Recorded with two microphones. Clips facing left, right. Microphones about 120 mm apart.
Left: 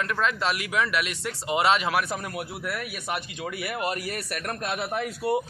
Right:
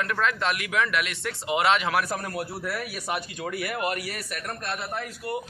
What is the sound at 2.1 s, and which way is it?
Speech, 15° left (ahead or behind).